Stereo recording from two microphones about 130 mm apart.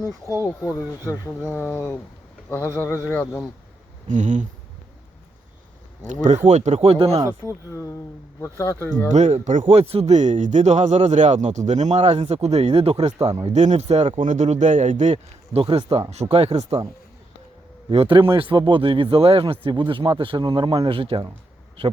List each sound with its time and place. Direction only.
0.0 s speech: 25° right (ahead or behind)
1.5 s speech: 20° left (ahead or behind)
4.1 s speech: 70° right (ahead or behind)
6.2 s speech: 65° right (ahead or behind); by 7.2 s 50° right (ahead or behind)
7.4 s speech: 20° left (ahead or behind)
9.0 s speech: 65° right (ahead or behind)
9.7 s speech: 50° right (ahead or behind)
13.5 s speech: 65° right (ahead or behind)
15.6 s speech: 50° right (ahead or behind)
17.8 s speech: 45° right (ahead or behind)